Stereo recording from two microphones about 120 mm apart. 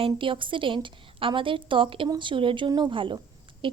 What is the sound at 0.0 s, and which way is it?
A woman's voice, 45° right (ahead or behind).